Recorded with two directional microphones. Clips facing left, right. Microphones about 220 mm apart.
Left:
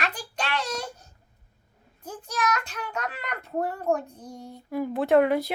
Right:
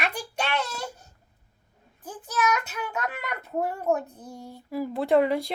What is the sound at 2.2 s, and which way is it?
A child's voice, 5° right (ahead or behind).